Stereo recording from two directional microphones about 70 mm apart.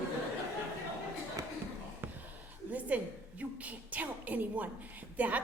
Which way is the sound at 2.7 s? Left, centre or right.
Right.